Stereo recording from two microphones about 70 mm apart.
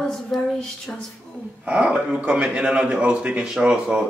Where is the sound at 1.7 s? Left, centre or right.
Centre.